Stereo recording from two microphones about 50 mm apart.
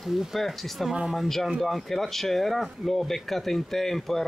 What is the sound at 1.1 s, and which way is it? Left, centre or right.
Speech, centre.